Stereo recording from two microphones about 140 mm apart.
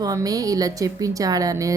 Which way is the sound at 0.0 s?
25° right (ahead or behind).